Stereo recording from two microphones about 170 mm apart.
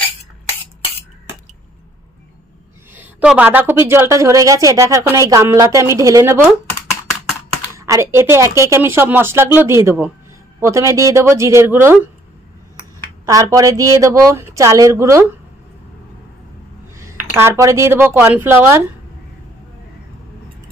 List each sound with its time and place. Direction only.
2.9 s a woman's voice: 10° right (ahead or behind)
7.8 s a woman's voice: 15° right (ahead or behind)
13.2 s speech: 20° right (ahead or behind)
17.4 s a woman's voice: 15° right (ahead or behind)